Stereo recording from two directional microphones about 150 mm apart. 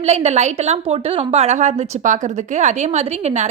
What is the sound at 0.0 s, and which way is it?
A woman's voice, 45° right (ahead or behind).